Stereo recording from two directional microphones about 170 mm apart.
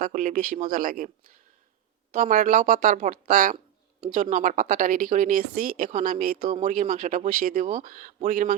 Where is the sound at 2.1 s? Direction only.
50° right (ahead or behind).